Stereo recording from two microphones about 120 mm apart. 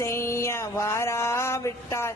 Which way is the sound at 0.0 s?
20° left (ahead or behind).